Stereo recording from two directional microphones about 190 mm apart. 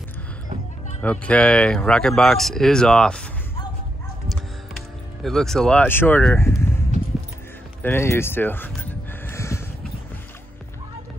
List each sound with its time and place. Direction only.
1.0 s speech: 5° left (ahead or behind)
5.2 s speech: centre (ahead or behind)
7.8 s a sound: 10° left (ahead or behind)